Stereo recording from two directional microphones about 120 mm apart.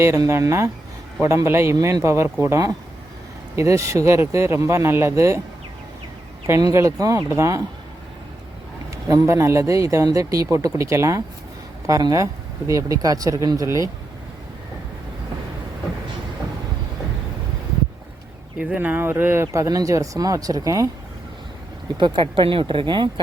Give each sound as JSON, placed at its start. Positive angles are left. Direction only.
{"t": 0.0, "sound": "speech", "side_deg": -25}
{"t": 6.7, "sound": "speech", "side_deg": -25}
{"t": 9.0, "sound": "speech", "side_deg": -25}
{"t": 18.6, "sound": "speech", "side_deg": -15}
{"t": 21.9, "sound": "speech", "side_deg": -40}